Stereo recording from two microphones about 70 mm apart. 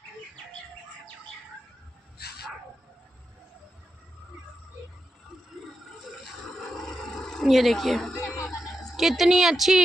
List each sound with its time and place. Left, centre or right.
6.0 s a sound: centre
7.4 s speech: centre
8.4 s dog: centre